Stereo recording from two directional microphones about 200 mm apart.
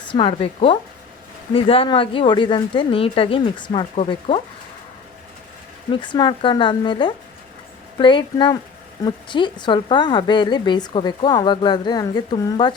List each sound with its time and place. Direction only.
0.1 s speech: 25° left (ahead or behind)
5.9 s speech: 25° left (ahead or behind)